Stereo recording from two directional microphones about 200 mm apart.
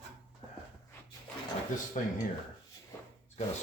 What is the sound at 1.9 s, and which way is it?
Speech, 35° left (ahead or behind).